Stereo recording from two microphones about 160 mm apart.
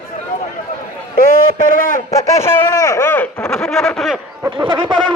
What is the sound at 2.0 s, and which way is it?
Speech, 20° left (ahead or behind).